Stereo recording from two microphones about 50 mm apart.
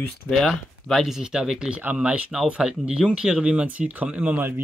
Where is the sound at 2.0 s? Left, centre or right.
Right.